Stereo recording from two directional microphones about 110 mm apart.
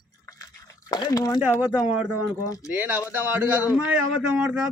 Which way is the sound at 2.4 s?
30° left (ahead or behind).